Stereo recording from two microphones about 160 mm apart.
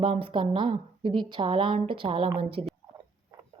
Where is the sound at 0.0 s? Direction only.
35° right (ahead or behind).